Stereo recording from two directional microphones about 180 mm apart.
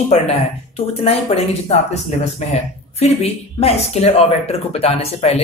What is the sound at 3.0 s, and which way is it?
Speech, 35° left (ahead or behind).